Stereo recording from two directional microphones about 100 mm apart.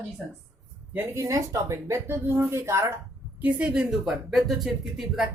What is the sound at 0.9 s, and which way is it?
Speech, 30° right (ahead or behind).